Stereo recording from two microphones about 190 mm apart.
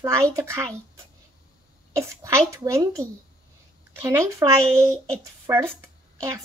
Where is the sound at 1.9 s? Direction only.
15° right (ahead or behind).